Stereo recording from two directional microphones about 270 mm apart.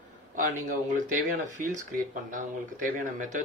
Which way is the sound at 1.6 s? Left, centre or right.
Right.